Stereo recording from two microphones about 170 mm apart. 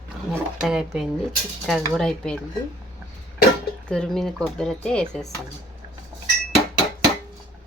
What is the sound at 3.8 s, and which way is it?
Speech, 5° left (ahead or behind).